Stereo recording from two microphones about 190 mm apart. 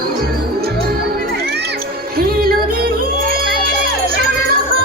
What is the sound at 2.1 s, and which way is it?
Music, 50° right (ahead or behind).